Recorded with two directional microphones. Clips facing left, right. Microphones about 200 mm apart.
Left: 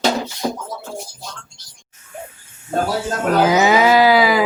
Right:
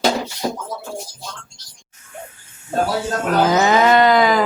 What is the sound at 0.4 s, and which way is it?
Speech, 5° right (ahead or behind).